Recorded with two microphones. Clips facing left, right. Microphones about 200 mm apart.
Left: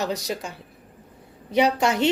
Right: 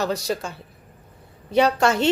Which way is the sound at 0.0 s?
20° left (ahead or behind).